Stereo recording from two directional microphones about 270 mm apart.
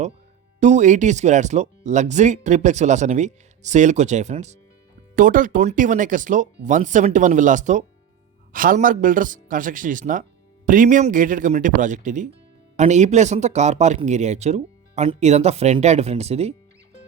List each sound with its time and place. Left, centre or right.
0.6 s speech: right